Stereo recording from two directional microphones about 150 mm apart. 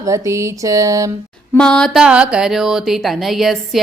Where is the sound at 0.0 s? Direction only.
20° right (ahead or behind).